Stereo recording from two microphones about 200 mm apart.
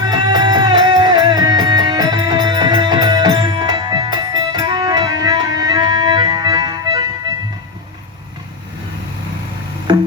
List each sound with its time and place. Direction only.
0.0 s music: 20° right (ahead or behind)
9.9 s music: 25° right (ahead or behind)